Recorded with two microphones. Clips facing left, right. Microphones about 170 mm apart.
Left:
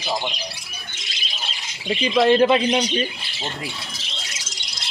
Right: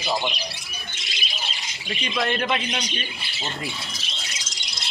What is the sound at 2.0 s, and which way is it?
A man's voice, 25° left (ahead or behind).